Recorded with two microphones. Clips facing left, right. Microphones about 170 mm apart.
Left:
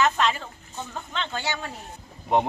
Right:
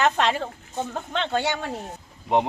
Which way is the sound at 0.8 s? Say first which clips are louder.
Right 5 dB; 55° right (ahead or behind).